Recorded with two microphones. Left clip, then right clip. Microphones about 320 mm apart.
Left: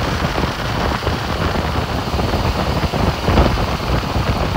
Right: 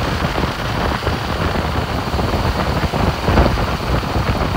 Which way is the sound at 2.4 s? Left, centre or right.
Centre.